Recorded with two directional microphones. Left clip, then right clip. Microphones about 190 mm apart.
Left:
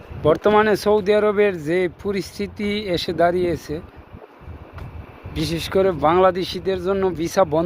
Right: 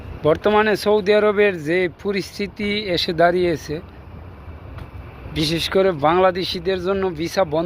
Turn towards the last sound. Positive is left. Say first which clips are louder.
# left 2 dB
turn(degrees=25)  # may be behind; listen again after turning